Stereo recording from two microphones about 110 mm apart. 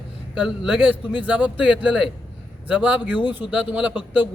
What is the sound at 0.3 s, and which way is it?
A man's voice, 10° right (ahead or behind).